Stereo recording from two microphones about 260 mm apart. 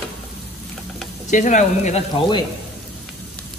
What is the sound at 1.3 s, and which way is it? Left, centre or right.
Speech, left.